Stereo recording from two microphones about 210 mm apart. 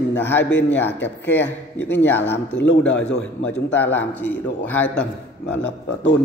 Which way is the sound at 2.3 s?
55° left (ahead or behind).